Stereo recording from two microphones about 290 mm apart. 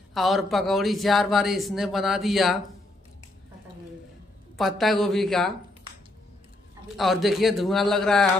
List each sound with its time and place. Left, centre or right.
0.1 s a man's voice: centre
4.6 s a man's voice: centre
7.0 s a man's voice: centre